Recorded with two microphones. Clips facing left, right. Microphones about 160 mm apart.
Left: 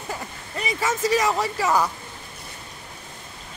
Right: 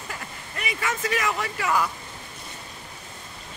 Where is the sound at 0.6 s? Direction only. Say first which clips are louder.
Left 5 dB; 30° left (ahead or behind).